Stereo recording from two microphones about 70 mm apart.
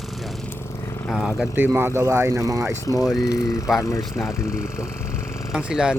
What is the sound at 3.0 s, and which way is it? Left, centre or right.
Speech, centre.